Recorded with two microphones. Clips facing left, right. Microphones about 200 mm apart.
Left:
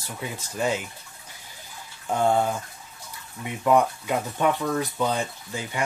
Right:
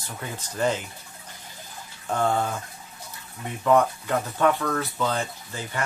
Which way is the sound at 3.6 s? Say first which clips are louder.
Even; 10° left (ahead or behind).